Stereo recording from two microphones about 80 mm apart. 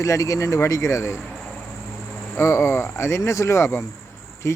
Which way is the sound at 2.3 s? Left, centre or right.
Left.